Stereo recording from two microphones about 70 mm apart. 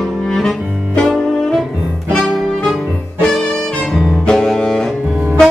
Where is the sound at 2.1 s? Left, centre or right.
Centre.